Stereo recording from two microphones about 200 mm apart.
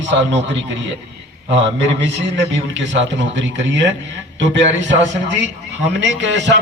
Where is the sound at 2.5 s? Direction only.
65° right (ahead or behind).